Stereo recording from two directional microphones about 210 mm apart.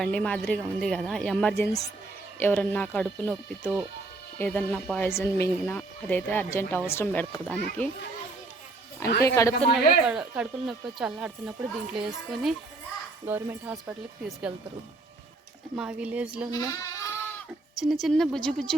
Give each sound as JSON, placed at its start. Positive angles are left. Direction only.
{"t": 0.0, "sound": "speech", "side_deg": 5}
{"t": 9.2, "sound": "speech", "side_deg": 15}
{"t": 9.7, "sound": "speech", "side_deg": -5}
{"t": 15.7, "sound": "speech", "side_deg": -5}
{"t": 16.5, "sound": "bleat", "side_deg": 15}
{"t": 17.7, "sound": "speech", "side_deg": 0}